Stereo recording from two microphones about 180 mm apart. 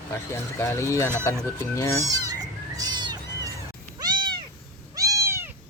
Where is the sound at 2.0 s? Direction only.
20° right (ahead or behind).